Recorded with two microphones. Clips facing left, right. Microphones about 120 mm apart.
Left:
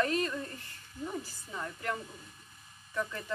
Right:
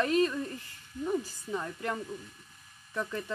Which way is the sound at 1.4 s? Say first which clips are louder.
Right 3 dB; 25° right (ahead or behind).